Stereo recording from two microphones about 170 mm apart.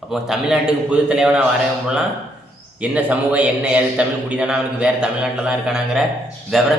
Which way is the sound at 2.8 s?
10° right (ahead or behind).